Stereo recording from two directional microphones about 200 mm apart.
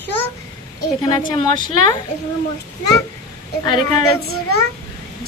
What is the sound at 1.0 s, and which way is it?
Speech, 20° left (ahead or behind).